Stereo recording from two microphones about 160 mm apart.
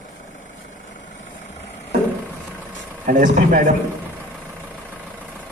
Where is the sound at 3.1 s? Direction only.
55° right (ahead or behind).